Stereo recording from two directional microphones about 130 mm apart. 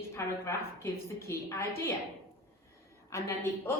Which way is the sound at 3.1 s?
20° left (ahead or behind).